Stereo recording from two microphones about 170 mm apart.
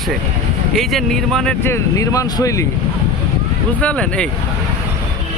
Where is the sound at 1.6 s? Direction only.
15° left (ahead or behind).